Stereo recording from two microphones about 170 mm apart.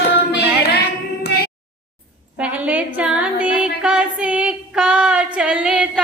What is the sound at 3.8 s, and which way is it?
Female singing, 5° right (ahead or behind).